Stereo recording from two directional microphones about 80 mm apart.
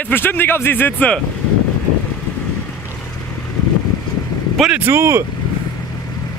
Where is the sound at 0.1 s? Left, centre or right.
Left.